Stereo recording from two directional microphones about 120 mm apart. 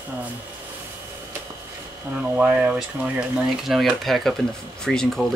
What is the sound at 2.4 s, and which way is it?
Speech, 10° right (ahead or behind).